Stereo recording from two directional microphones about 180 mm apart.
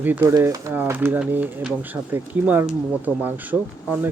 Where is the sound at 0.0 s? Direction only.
10° right (ahead or behind).